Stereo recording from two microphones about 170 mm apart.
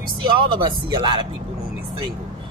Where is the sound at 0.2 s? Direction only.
30° right (ahead or behind).